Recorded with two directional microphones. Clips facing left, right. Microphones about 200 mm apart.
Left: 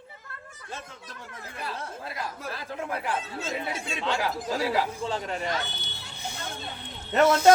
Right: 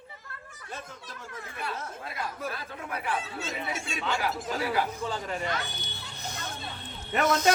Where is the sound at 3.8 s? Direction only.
30° left (ahead or behind).